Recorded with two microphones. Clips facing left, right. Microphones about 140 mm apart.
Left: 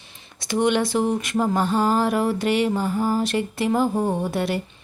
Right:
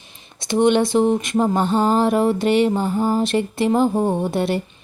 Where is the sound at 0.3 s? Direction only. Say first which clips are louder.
Right 4 dB; 25° right (ahead or behind).